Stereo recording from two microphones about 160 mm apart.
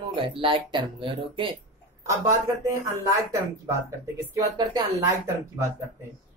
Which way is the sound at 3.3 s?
20° right (ahead or behind).